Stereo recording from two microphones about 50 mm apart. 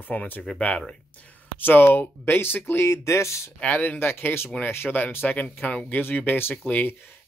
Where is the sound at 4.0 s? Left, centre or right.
Left.